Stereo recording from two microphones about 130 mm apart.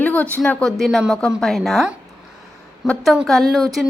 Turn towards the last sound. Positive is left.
turn(degrees=0)  # may be behind; listen again after turning